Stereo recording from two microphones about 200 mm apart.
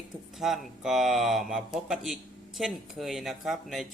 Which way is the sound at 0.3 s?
Centre (ahead or behind).